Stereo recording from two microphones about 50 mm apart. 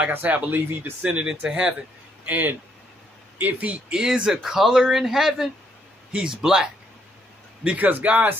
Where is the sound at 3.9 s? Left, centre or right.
Centre.